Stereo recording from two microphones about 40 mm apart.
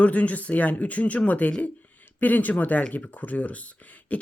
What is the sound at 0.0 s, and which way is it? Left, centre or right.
Speech, left.